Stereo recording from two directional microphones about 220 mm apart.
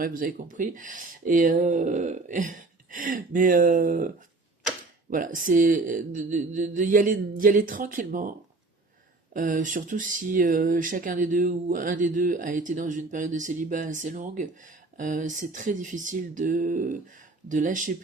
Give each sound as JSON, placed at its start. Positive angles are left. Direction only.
{"t": 0.0, "sound": "speech", "side_deg": -40}
{"t": 5.1, "sound": "speech", "side_deg": -35}